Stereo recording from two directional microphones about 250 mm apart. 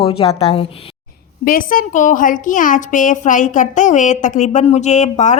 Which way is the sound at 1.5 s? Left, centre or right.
Left.